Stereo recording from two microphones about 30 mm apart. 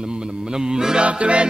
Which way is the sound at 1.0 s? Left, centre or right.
Right.